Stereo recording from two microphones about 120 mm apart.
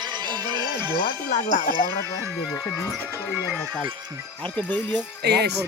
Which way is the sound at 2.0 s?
25° right (ahead or behind).